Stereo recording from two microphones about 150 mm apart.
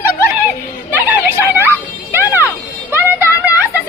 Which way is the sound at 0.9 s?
10° right (ahead or behind).